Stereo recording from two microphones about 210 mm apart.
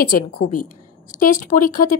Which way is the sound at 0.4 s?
90° left.